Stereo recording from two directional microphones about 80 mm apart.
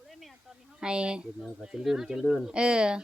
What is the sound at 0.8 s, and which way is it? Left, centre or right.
A woman's voice, centre.